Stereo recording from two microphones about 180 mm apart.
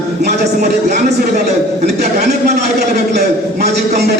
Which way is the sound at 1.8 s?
65° right (ahead or behind).